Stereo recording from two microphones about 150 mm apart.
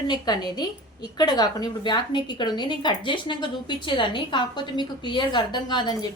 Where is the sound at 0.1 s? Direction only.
25° left (ahead or behind).